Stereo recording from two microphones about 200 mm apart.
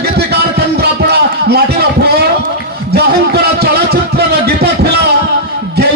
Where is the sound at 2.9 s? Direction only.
55° right (ahead or behind).